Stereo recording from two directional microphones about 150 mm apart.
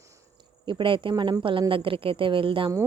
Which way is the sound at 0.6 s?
35° right (ahead or behind).